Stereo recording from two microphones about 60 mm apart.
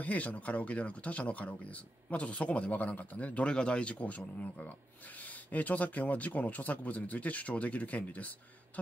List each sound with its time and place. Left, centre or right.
0.0 s speech: left